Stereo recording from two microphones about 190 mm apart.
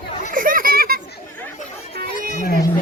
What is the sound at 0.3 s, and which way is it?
Children playing, 45° right (ahead or behind).